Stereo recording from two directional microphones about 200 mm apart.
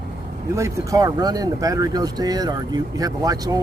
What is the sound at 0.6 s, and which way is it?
Speech, 15° right (ahead or behind).